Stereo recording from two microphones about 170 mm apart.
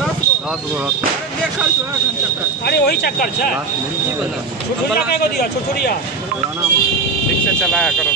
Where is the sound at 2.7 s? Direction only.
75° left (ahead or behind).